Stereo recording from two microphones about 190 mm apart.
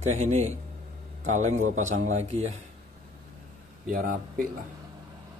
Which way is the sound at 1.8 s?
90° right.